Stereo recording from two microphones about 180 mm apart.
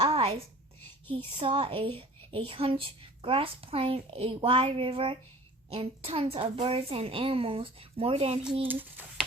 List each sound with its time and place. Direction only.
0.1 s a sound: 30° right (ahead or behind)
1.4 s a woman's voice: 30° right (ahead or behind)
8.6 s speech: 10° right (ahead or behind)